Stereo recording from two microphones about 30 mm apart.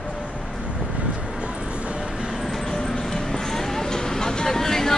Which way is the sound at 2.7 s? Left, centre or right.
Centre.